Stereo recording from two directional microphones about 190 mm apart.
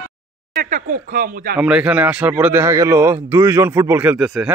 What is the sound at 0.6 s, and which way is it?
Speech, 45° right (ahead or behind).